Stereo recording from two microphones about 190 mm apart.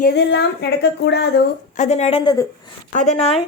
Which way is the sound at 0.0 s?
65° left (ahead or behind).